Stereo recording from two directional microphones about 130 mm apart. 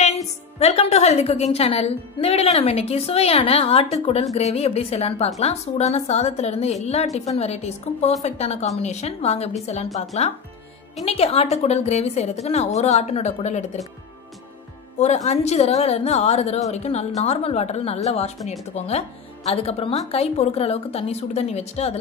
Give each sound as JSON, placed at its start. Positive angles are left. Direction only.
{"t": 0.6, "sound": "a woman's voice", "side_deg": 55}
{"t": 15.0, "sound": "a woman's voice", "side_deg": 60}